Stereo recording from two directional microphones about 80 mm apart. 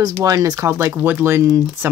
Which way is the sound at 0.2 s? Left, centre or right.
Right.